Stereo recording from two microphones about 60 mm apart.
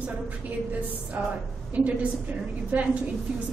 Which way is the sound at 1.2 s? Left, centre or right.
Right.